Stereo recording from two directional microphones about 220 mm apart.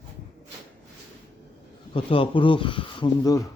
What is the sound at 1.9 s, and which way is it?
Speech, 25° left (ahead or behind).